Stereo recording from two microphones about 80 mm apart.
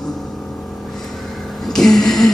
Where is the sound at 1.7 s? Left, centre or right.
Centre.